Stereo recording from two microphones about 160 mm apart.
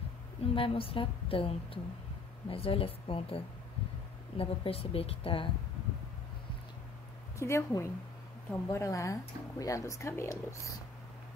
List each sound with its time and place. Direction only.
0.6 s a woman's voice: 35° left (ahead or behind)
7.3 s a woman's voice: 20° left (ahead or behind)